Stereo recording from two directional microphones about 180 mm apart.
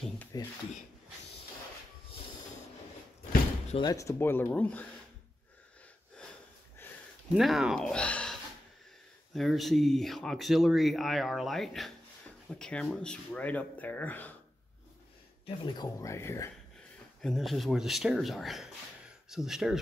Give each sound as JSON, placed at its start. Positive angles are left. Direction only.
{"t": 0.3, "sound": "speech", "side_deg": 20}
{"t": 3.8, "sound": "speech", "side_deg": 20}
{"t": 7.3, "sound": "speech", "side_deg": 0}
{"t": 15.4, "sound": "speech", "side_deg": 25}
{"t": 17.2, "sound": "speech", "side_deg": 0}